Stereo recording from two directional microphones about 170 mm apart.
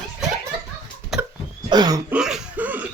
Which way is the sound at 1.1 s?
Centre (ahead or behind).